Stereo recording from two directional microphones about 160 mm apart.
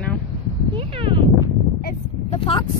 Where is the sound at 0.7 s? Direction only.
35° right (ahead or behind).